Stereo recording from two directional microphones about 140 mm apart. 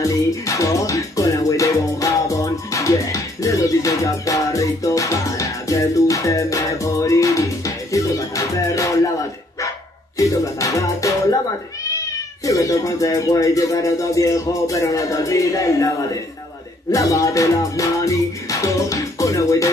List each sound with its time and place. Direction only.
0.0 s music: 25° left (ahead or behind)
10.1 s music: 25° left (ahead or behind)
12.4 s music: 25° left (ahead or behind)
16.9 s music: 20° left (ahead or behind)